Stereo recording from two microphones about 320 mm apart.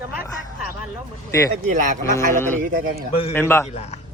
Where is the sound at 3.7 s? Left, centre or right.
Left.